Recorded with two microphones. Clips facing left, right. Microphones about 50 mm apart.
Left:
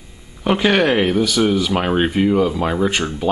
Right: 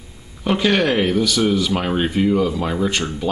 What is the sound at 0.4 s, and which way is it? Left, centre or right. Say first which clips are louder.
Speech: left 2 dB; centre.